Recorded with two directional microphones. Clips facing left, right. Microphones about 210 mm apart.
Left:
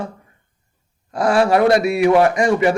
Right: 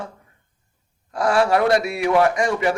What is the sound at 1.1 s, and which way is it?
A man's voice, 15° left (ahead or behind).